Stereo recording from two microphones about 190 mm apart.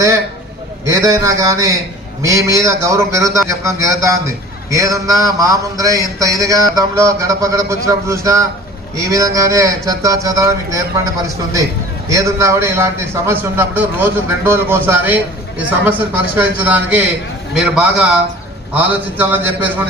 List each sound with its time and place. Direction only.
0.9 s speech: 15° right (ahead or behind)
12.0 s a man's voice: 15° right (ahead or behind)